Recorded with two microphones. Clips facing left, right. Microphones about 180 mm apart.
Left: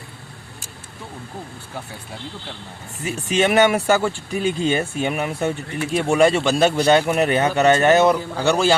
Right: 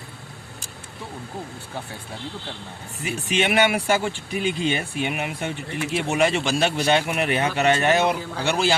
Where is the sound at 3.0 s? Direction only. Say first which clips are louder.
Left 4 dB; 40° left (ahead or behind).